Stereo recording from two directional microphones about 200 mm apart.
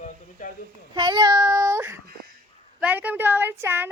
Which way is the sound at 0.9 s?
20° right (ahead or behind).